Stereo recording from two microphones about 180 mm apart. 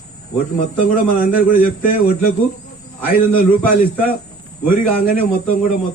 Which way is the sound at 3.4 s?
50° left (ahead or behind).